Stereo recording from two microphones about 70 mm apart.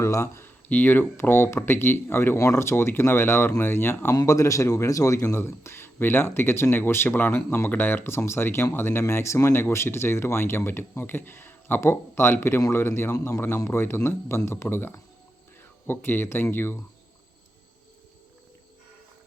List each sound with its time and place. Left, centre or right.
0.0 s speech: left
0.4 s a man's voice: left
4.1 s a man's voice: left